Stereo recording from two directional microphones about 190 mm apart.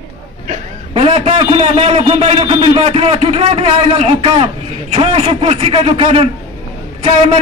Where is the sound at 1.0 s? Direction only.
30° right (ahead or behind).